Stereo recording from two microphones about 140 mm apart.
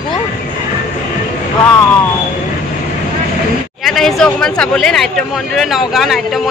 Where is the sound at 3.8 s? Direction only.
Centre (ahead or behind).